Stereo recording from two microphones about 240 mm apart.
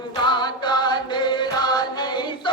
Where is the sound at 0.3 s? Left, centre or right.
Centre.